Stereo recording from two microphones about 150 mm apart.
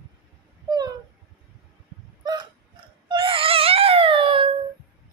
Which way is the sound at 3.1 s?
35° right (ahead or behind).